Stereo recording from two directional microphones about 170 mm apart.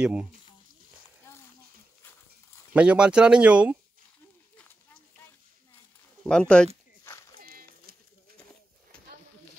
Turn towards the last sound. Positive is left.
turn(degrees=-60)  # may be behind; listen again after turning